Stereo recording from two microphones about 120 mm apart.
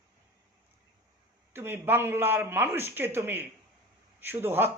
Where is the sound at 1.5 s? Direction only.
15° right (ahead or behind).